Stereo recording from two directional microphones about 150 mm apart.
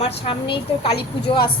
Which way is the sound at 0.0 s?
35° left (ahead or behind).